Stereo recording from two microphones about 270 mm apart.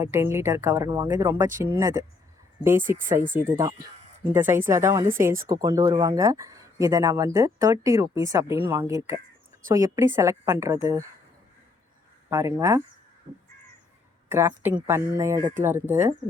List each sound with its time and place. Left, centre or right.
0.0 s speech: centre
3.0 s speech: right
3.6 s speech: centre
12.3 s speech: centre
14.3 s speech: centre